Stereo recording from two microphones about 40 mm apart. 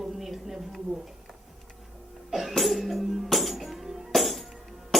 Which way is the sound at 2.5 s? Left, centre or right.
Centre.